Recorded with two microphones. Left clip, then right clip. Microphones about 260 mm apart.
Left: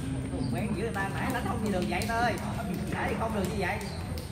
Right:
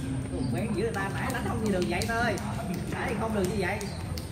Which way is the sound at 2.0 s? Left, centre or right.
Left.